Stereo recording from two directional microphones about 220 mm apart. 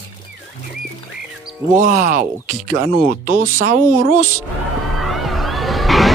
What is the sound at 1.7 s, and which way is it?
Speech, 35° right (ahead or behind).